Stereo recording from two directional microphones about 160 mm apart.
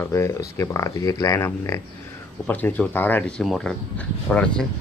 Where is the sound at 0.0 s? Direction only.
20° left (ahead or behind).